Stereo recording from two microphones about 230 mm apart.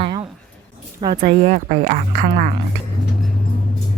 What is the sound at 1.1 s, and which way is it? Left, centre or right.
A woman's voice, right.